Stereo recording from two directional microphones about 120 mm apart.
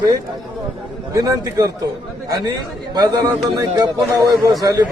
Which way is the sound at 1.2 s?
30° right (ahead or behind).